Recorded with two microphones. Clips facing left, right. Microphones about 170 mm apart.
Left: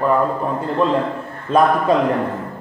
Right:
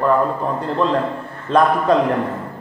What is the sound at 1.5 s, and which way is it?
Speech, 5° left (ahead or behind).